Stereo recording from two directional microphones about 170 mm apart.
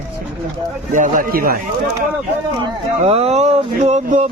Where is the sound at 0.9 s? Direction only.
50° right (ahead or behind).